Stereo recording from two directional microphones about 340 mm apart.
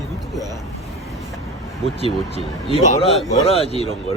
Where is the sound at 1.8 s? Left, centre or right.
Centre.